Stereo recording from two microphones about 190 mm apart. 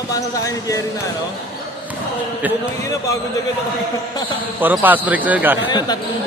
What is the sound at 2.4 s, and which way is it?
Speech, 10° right (ahead or behind).